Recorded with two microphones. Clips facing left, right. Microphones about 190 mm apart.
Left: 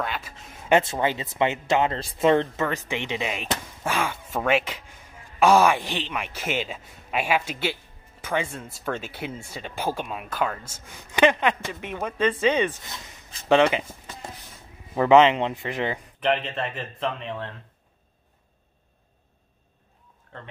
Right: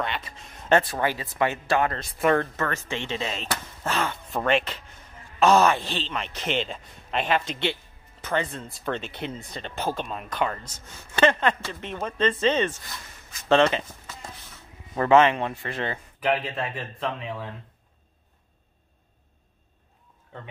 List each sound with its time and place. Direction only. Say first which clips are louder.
0.0 s speech: even; 5° left (ahead or behind); by 13.5 s 25° left (ahead or behind)
13.5 s speech: left 1 dB; 15° left (ahead or behind)
15.0 s speech: left 2 dB; 15° left (ahead or behind)
16.2 s speech: even; 5° right (ahead or behind)